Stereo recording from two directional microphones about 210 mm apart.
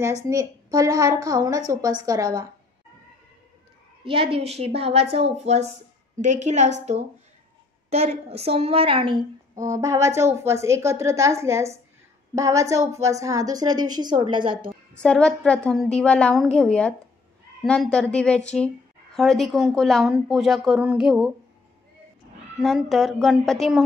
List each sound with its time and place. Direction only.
0.0 s a woman's voice: 15° right (ahead or behind)
4.0 s a woman's voice: 25° right (ahead or behind)
15.0 s speech: 5° left (ahead or behind)
22.6 s speech: centre (ahead or behind)